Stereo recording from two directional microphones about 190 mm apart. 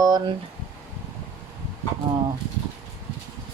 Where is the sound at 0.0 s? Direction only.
20° right (ahead or behind).